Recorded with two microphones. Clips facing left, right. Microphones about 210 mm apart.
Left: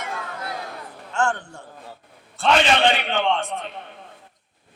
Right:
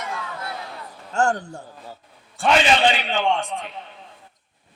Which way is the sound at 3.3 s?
15° right (ahead or behind).